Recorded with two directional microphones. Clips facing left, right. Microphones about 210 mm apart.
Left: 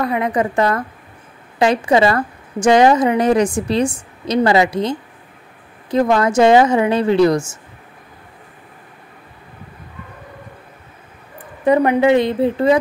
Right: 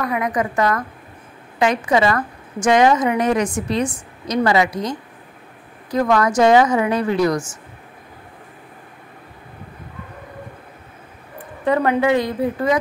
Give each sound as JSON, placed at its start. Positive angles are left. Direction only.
{"t": 0.0, "sound": "a woman's voice", "side_deg": 30}
{"t": 11.6, "sound": "a woman's voice", "side_deg": 20}